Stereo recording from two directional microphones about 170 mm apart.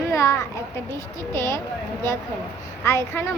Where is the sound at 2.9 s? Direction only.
15° left (ahead or behind).